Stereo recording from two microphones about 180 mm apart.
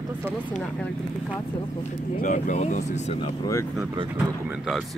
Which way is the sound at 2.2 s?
45° left (ahead or behind).